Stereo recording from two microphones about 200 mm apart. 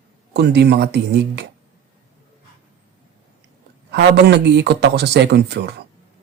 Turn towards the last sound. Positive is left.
turn(degrees=-55)  # may be behind; listen again after turning